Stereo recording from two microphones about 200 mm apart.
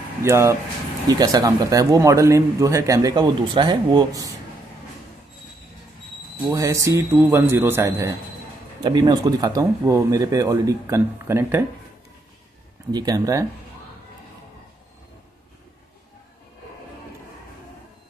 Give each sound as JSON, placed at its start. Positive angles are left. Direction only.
{"t": 0.2, "sound": "speech", "side_deg": -15}
{"t": 6.4, "sound": "speech", "side_deg": -15}
{"t": 12.9, "sound": "speech", "side_deg": -20}